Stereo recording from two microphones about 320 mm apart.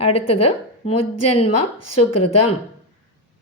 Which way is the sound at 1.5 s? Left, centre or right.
Left.